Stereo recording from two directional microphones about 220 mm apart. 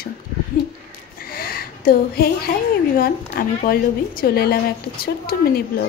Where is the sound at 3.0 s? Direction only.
40° left (ahead or behind).